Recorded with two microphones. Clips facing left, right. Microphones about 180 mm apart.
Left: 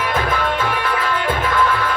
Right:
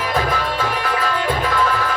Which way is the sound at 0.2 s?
40° right (ahead or behind).